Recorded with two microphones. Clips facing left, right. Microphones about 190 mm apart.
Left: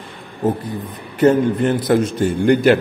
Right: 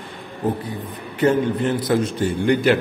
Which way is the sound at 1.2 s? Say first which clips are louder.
Left 4 dB; 50° left (ahead or behind).